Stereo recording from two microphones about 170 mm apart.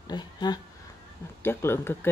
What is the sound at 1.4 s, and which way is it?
Mantra, 15° left (ahead or behind).